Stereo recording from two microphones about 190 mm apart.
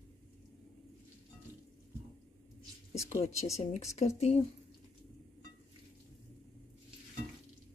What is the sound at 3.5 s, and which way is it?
Speech, 35° left (ahead or behind).